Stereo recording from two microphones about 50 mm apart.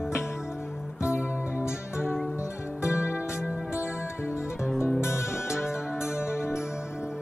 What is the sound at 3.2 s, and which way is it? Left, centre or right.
Music, right.